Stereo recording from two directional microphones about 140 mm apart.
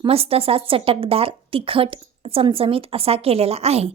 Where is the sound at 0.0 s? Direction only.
45° right (ahead or behind).